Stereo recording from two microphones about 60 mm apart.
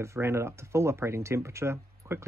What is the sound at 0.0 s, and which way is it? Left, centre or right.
Speech, right.